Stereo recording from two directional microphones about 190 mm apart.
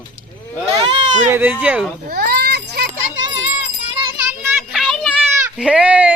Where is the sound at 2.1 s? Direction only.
55° right (ahead or behind).